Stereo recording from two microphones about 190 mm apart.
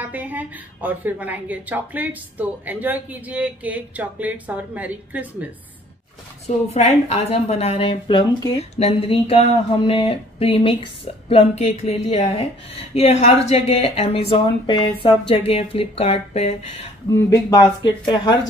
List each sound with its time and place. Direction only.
0.1 s speech: 10° right (ahead or behind)
6.4 s a woman's voice: 35° left (ahead or behind)
8.7 s a woman's voice: 30° left (ahead or behind)
17.3 s speech: 20° left (ahead or behind)